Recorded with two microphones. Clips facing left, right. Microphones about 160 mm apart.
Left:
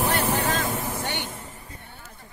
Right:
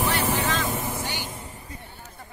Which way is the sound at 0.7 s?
10° right (ahead or behind).